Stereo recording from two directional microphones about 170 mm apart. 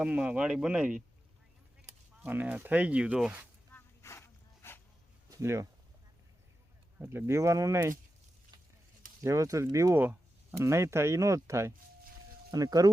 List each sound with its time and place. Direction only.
0.0 s speech: 10° right (ahead or behind)
2.2 s speech: 10° right (ahead or behind)
3.7 s a sound: 15° left (ahead or behind)
5.3 s speech: 15° right (ahead or behind)
7.0 s speech: 15° right (ahead or behind)
9.2 s speech: 20° right (ahead or behind)